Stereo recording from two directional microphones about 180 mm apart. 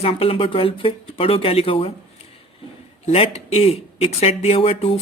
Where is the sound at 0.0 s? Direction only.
30° left (ahead or behind).